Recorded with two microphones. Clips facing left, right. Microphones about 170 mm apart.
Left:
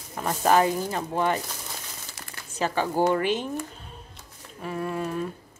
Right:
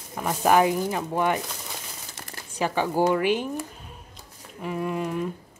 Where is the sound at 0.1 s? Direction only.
10° right (ahead or behind).